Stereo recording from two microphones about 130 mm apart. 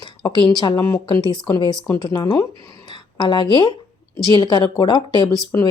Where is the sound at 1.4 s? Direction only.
35° left (ahead or behind).